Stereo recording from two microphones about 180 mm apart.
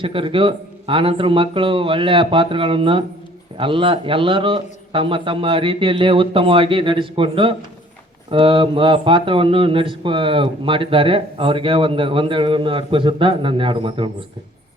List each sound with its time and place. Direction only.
0.0 s speech: 30° right (ahead or behind)